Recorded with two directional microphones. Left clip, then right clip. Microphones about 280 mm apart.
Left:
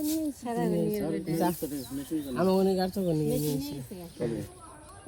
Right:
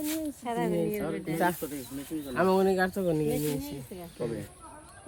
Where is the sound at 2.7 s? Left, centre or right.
Centre.